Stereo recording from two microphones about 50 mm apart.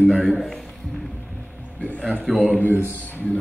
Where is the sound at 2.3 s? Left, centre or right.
Centre.